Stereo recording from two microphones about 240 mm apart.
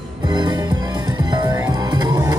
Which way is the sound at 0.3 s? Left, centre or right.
Centre.